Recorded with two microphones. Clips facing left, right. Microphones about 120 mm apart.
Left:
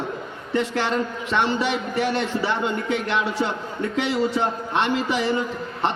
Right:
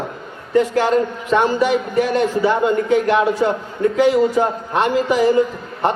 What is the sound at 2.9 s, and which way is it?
Speech, 40° right (ahead or behind).